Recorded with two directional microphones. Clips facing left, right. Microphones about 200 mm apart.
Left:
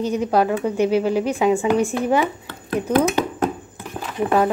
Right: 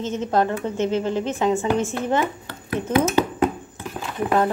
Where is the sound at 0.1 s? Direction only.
15° left (ahead or behind).